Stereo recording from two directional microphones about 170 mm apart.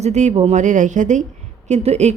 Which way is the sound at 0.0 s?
40° right (ahead or behind).